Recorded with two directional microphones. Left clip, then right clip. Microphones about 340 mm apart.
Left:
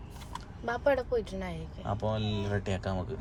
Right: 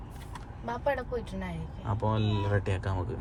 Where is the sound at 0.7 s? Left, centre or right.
Left.